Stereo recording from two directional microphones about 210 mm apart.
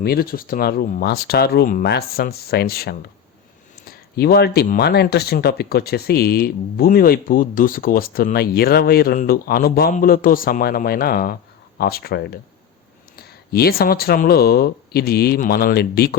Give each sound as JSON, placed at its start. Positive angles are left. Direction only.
{"t": 0.0, "sound": "speech", "side_deg": 45}